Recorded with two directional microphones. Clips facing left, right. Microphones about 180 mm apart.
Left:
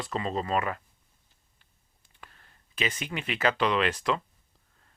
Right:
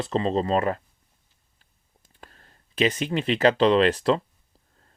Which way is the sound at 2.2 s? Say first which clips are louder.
Right 4 dB; 40° right (ahead or behind).